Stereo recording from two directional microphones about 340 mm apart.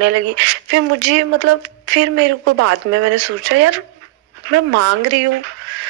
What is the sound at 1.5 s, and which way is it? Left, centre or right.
Speech, right.